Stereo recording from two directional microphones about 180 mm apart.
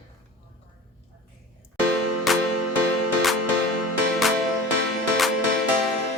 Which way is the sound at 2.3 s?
Centre (ahead or behind).